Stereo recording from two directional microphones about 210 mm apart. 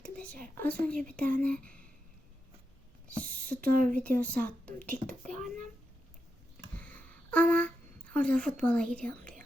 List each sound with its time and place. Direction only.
0.3 s a child's voice: 40° right (ahead or behind)
0.6 s a woman's voice: 5° left (ahead or behind)
1.1 s a child's voice: 40° right (ahead or behind)
1.4 s speech: 5° left (ahead or behind)
3.2 s speech: 45° right (ahead or behind)
4.2 s a woman's voice: 10° left (ahead or behind)
5.2 s a child's voice: 35° right (ahead or behind)
6.7 s a sound: 5° left (ahead or behind)
8.1 s speech: 5° left (ahead or behind)